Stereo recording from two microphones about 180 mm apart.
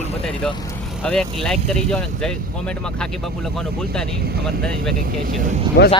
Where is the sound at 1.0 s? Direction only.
5° left (ahead or behind).